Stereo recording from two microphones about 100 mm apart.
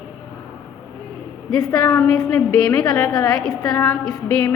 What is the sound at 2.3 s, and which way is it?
Speech, 15° left (ahead or behind).